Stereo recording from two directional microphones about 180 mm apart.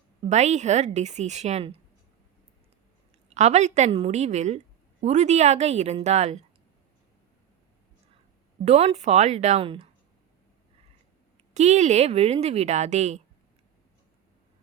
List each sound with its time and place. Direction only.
0.3 s a woman's voice: 40° right (ahead or behind)
3.3 s a woman's voice: 40° right (ahead or behind)
8.6 s a woman's voice: 35° right (ahead or behind)
11.5 s a woman's voice: 40° right (ahead or behind)